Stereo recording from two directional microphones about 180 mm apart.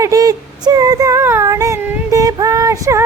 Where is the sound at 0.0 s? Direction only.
20° right (ahead or behind).